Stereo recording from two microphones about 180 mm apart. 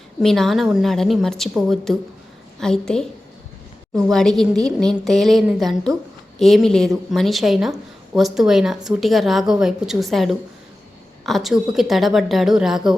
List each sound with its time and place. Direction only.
0.2 s a woman's voice: centre (ahead or behind)